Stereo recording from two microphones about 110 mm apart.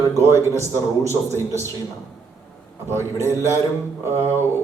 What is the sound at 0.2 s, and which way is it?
Speech, 25° right (ahead or behind).